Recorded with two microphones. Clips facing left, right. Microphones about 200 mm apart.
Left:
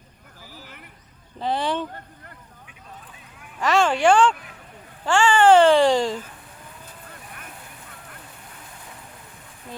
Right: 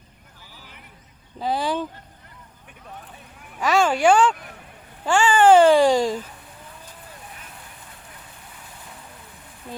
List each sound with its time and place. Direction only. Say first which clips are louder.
0.5 s a sound: left 5 dB; 45° left (ahead or behind)
1.4 s speech: even; 5° right (ahead or behind)
3.6 s speech: even; 10° right (ahead or behind)